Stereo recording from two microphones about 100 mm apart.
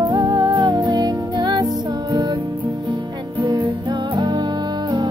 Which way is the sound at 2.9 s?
45° right (ahead or behind).